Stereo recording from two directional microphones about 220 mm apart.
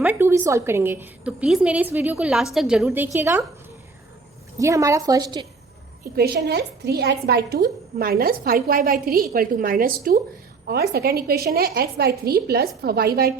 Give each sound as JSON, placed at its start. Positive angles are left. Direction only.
{"t": 0.0, "sound": "a woman's voice", "side_deg": -10}
{"t": 4.5, "sound": "a woman's voice", "side_deg": -15}
{"t": 6.1, "sound": "a woman's voice", "side_deg": -45}